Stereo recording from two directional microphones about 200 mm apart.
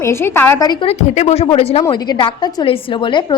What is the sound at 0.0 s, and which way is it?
A woman's voice, 10° left (ahead or behind).